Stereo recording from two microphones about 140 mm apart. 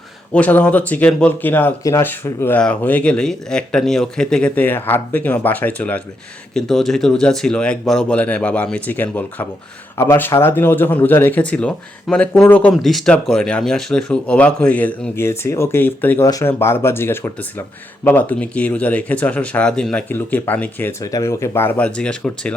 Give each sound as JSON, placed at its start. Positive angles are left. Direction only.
{"t": 0.3, "sound": "speech", "side_deg": 10}
{"t": 12.7, "sound": "speech", "side_deg": 0}